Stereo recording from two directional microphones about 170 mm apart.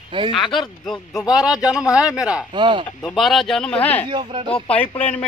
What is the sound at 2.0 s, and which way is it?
Speech, 20° left (ahead or behind).